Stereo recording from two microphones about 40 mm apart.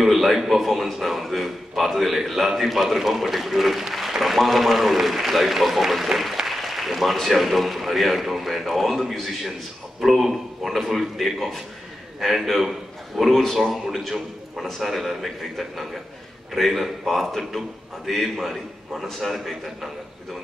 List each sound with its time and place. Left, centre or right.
0.0 s a man's voice: centre
10.0 s a man's voice: centre